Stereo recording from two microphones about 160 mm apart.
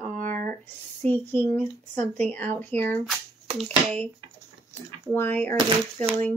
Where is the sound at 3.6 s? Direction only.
10° left (ahead or behind).